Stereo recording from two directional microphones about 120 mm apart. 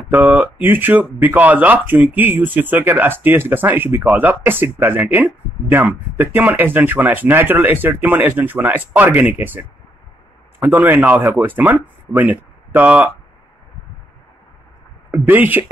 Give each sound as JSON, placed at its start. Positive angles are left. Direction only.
{"t": 0.1, "sound": "speech", "side_deg": -15}
{"t": 15.0, "sound": "speech", "side_deg": -15}